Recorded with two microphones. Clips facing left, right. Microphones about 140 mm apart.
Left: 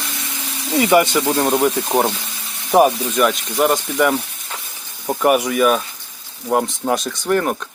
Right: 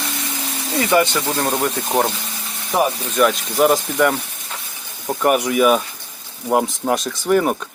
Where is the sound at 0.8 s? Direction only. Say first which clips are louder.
Left 3 dB; 10° left (ahead or behind).